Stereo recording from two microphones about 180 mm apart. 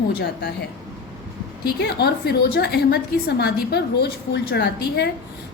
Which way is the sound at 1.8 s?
65° left (ahead or behind).